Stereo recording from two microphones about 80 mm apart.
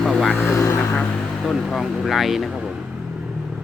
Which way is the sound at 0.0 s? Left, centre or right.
Centre.